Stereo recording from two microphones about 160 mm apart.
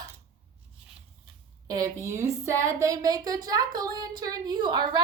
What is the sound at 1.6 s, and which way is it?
A woman's voice, 20° right (ahead or behind).